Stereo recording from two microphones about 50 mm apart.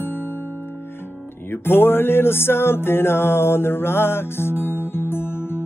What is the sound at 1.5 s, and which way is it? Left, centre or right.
Music, left.